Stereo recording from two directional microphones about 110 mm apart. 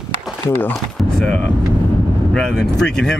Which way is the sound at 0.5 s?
15° left (ahead or behind).